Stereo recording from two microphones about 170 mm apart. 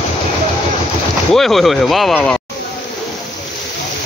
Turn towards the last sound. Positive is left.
turn(degrees=0)  # may be behind; listen again after turning